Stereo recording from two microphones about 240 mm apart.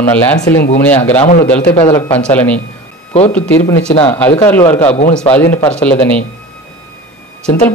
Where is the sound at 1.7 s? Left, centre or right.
Centre.